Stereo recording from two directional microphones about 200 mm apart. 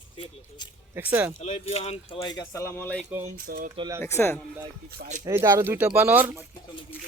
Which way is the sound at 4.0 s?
10° left (ahead or behind).